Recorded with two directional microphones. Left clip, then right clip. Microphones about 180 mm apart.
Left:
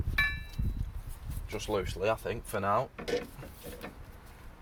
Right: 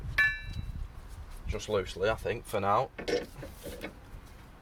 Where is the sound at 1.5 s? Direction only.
20° left (ahead or behind).